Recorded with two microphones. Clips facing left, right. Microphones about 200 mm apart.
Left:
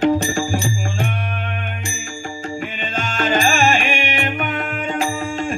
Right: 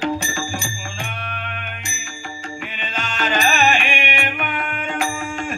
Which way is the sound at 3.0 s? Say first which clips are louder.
Left 3 dB; 45° left (ahead or behind).